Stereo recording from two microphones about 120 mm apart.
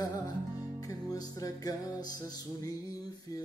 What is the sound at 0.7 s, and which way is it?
Music, 30° left (ahead or behind).